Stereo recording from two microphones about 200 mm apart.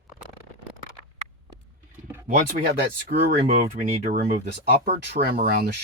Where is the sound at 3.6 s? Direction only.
35° right (ahead or behind).